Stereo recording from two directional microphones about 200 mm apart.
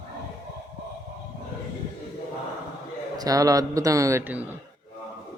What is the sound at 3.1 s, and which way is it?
A man's voice, 15° right (ahead or behind).